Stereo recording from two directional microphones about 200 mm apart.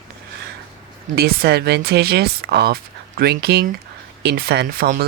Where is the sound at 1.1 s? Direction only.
50° right (ahead or behind).